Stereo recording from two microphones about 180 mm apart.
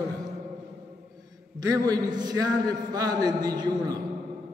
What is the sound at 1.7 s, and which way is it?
A man's voice, 20° right (ahead or behind).